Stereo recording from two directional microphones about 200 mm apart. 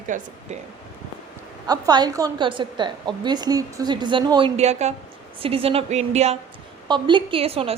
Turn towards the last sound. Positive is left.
turn(degrees=-30)  # may be behind; listen again after turning